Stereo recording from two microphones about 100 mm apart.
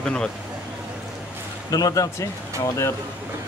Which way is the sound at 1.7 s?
35° left (ahead or behind).